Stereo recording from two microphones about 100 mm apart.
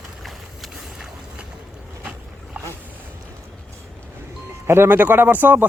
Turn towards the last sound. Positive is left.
turn(degrees=-15)  # may be behind; listen again after turning